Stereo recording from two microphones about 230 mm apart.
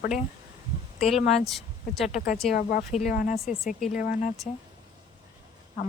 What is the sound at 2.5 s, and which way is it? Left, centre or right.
Speech, left.